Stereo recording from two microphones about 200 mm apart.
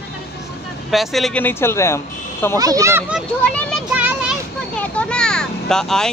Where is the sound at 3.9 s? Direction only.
5° right (ahead or behind).